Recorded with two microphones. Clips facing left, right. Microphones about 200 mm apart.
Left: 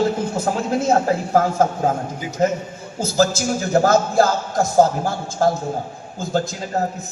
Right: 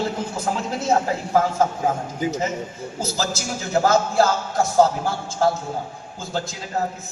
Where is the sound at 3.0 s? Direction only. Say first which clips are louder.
Left 8 dB; 50° left (ahead or behind).